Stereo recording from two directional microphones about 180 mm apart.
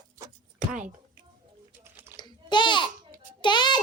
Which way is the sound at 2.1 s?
25° left (ahead or behind).